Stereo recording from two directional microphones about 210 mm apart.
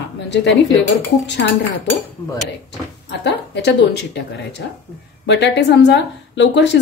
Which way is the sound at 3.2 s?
55° left (ahead or behind).